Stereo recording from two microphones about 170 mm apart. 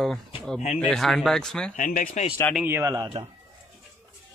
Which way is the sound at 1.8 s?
50° left (ahead or behind).